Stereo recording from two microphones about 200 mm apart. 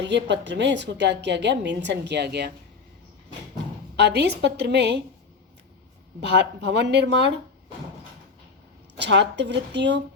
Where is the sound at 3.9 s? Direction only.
55° right (ahead or behind).